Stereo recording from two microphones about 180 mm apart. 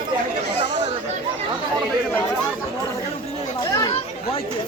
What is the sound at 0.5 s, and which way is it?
Chatter, 70° left (ahead or behind).